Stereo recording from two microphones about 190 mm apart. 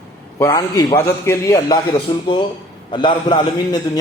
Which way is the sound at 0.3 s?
15° left (ahead or behind).